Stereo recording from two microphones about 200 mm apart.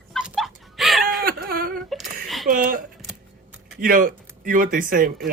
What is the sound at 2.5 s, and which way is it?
Speech, 45° right (ahead or behind).